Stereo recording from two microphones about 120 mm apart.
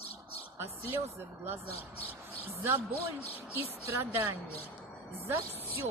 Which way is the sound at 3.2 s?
55° left (ahead or behind).